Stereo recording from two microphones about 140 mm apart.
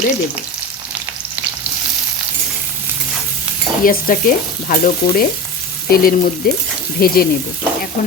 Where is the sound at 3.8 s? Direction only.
80° left.